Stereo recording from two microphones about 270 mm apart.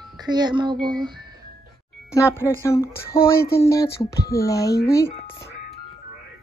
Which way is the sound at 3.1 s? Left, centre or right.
Left.